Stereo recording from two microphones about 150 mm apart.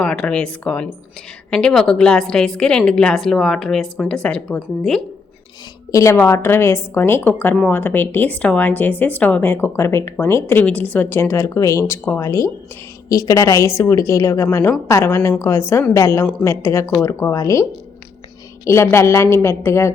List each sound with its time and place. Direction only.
0.0 s a woman's voice: 5° left (ahead or behind)
5.9 s a woman's voice: 20° left (ahead or behind)